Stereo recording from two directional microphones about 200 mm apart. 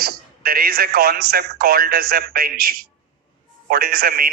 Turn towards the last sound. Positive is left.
turn(degrees=-50)  # may be behind; listen again after turning